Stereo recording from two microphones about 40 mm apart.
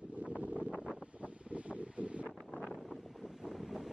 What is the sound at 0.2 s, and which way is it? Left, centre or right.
Wind noise, right.